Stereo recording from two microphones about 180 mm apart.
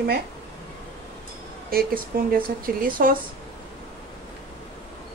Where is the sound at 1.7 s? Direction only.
55° right (ahead or behind).